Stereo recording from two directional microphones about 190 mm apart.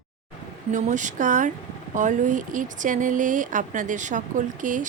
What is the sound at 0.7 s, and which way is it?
Speech, 40° right (ahead or behind).